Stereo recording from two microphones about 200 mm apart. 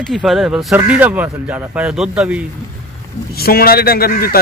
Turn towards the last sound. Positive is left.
turn(degrees=45)  # may be behind; listen again after turning